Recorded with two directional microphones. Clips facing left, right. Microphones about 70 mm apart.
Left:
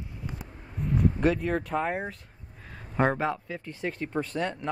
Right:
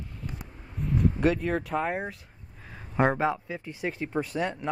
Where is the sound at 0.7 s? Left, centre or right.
Centre.